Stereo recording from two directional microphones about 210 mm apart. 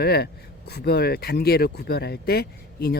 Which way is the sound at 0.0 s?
50° left (ahead or behind).